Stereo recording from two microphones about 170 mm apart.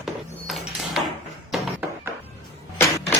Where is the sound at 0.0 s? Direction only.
Centre (ahead or behind).